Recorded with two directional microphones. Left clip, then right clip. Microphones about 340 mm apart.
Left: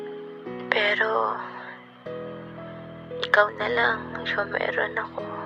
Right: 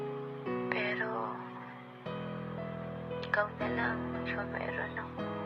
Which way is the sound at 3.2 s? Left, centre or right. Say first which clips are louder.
Left 12 dB; right.